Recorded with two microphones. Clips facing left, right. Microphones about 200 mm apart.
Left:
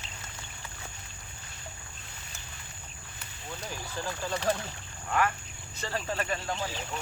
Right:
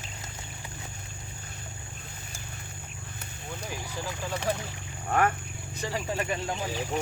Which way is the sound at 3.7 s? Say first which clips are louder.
Even; 15° right (ahead or behind).